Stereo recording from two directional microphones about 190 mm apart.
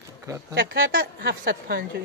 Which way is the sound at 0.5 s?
75° right (ahead or behind).